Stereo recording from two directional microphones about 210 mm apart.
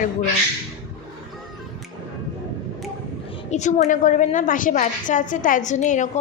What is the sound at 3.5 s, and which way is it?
A woman's voice, 35° left (ahead or behind).